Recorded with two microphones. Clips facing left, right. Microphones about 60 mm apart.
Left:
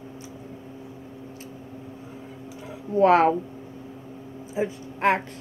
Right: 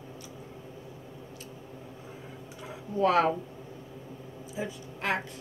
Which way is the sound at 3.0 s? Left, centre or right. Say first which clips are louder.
Left 7 dB; left.